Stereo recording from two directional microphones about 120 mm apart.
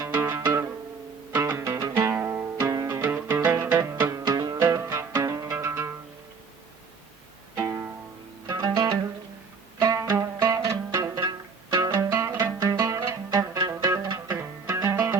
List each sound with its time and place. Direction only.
0.0 s music: 20° right (ahead or behind)
4.5 s music: 20° right (ahead or behind)
7.5 s music: 25° right (ahead or behind)
12.5 s music: 35° right (ahead or behind)
12.8 s music: 25° right (ahead or behind)